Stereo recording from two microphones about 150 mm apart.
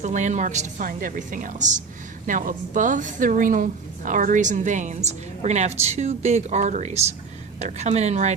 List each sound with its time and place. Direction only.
0.0 s a woman's voice: 55° right (ahead or behind)
0.9 s a woman's voice: 65° right (ahead or behind); by 8.4 s 50° right (ahead or behind)